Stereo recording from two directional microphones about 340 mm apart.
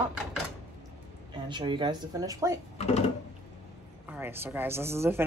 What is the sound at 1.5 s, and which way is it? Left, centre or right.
Speech, centre.